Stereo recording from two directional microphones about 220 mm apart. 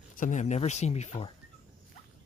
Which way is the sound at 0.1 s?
35° left (ahead or behind).